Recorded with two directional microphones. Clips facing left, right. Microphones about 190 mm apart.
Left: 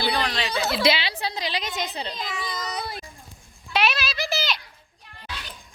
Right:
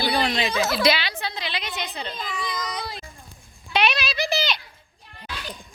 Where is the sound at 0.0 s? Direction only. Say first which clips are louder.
Right 2 dB; 15° right (ahead or behind).